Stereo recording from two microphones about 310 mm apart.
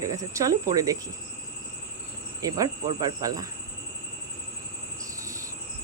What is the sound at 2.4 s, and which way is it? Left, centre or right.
Speech, centre.